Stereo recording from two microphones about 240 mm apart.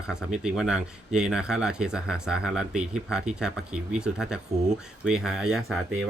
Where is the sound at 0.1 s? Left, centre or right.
Centre.